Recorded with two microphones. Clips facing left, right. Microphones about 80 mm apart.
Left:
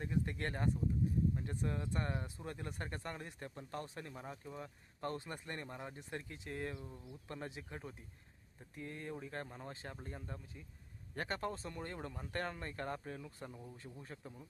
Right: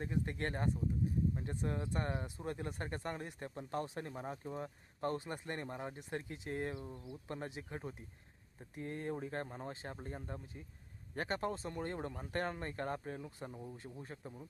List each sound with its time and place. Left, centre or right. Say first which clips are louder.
0.0 s speech: right 1 dB; centre
8.7 s speech: right 5 dB; right
13.6 s speech: right 4 dB; centre